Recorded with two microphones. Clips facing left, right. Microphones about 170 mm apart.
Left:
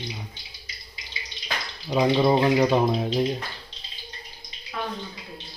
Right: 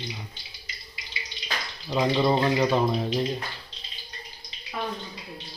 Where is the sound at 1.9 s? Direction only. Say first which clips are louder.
Left 3 dB; 10° left (ahead or behind).